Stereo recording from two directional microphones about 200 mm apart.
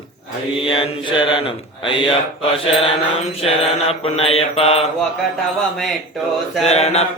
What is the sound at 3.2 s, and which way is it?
Mantra, 30° left (ahead or behind).